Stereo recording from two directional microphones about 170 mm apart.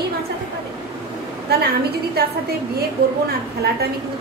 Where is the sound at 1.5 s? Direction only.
70° right (ahead or behind).